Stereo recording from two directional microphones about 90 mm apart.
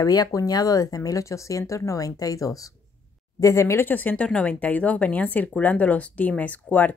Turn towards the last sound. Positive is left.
turn(degrees=20)  # may be behind; listen again after turning